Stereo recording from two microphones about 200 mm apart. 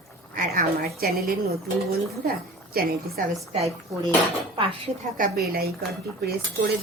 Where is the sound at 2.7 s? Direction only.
50° right (ahead or behind).